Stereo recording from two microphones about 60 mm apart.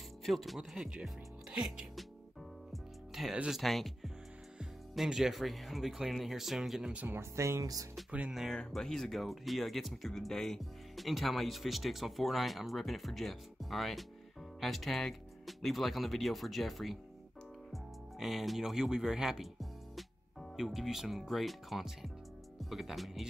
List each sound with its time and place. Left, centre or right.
0.2 s speech: centre
2.7 s music: centre
3.4 s speech: centre
7.1 s speech: right
8.5 s speech: centre
18.2 s speech: centre